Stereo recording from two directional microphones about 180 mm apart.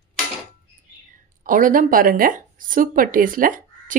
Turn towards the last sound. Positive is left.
turn(degrees=-45)  # may be behind; listen again after turning